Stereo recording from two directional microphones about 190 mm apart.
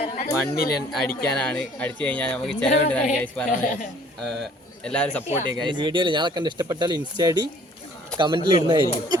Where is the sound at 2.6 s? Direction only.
35° left (ahead or behind).